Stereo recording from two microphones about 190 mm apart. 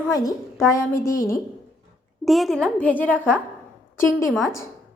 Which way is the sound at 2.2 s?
Centre (ahead or behind).